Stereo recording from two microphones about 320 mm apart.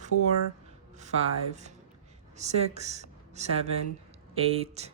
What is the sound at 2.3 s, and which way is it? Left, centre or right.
Speech, right.